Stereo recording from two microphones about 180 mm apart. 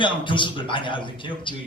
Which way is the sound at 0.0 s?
25° left (ahead or behind).